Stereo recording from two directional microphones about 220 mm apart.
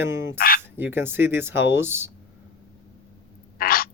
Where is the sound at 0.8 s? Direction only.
10° right (ahead or behind).